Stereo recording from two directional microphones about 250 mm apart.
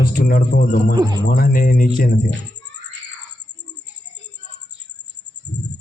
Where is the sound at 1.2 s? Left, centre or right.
Left.